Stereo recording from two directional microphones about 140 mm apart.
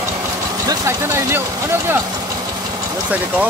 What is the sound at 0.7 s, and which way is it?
Speech, 20° right (ahead or behind).